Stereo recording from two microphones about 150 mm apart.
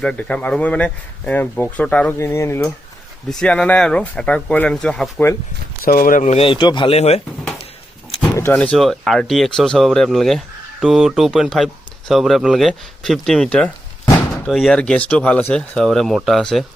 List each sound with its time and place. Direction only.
0.0 s speech: 5° left (ahead or behind)
3.2 s speech: 5° left (ahead or behind)
5.8 s speech: 70° left (ahead or behind); by 7.2 s 45° left (ahead or behind)
8.4 s speech: 10° left (ahead or behind)